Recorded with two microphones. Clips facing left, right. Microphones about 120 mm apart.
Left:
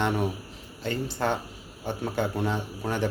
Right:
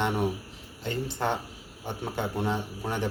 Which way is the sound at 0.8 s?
20° right (ahead or behind).